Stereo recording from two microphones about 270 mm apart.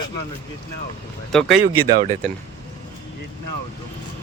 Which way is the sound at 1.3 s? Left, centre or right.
Centre.